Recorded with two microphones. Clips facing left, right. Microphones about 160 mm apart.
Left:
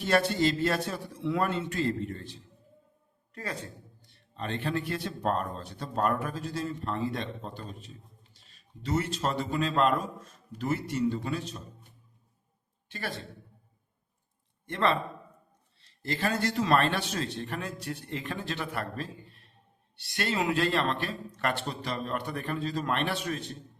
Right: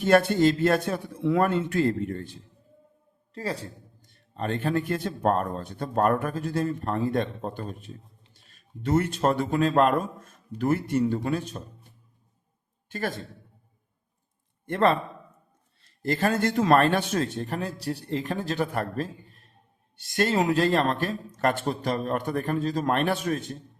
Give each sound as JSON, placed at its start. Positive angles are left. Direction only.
{"t": 0.0, "sound": "speech", "side_deg": -55}
{"t": 3.3, "sound": "a man's voice", "side_deg": -30}
{"t": 4.0, "sound": "speech", "side_deg": -45}
{"t": 12.9, "sound": "speech", "side_deg": -45}
{"t": 14.7, "sound": "speech", "side_deg": -45}